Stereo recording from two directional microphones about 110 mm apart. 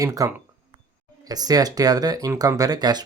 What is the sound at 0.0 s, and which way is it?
Speech, 30° right (ahead or behind).